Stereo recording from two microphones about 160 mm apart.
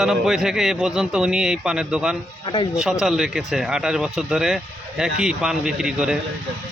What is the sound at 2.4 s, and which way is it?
Speech, 30° left (ahead or behind).